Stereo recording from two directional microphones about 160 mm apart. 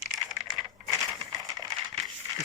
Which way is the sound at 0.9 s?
20° right (ahead or behind).